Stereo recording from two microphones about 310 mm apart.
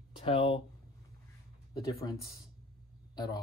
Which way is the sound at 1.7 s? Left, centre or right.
Centre.